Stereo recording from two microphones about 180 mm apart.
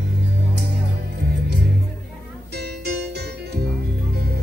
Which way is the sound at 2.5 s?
65° right (ahead or behind).